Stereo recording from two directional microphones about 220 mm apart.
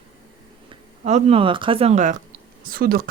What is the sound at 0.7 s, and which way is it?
Speech, 30° right (ahead or behind).